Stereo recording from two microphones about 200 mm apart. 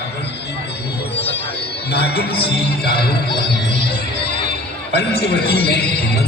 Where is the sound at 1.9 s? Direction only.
55° left (ahead or behind).